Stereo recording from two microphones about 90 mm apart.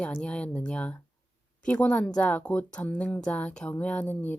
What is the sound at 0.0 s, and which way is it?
A woman's voice, 10° left (ahead or behind).